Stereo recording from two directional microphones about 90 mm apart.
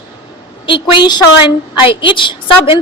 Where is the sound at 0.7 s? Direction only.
65° left (ahead or behind).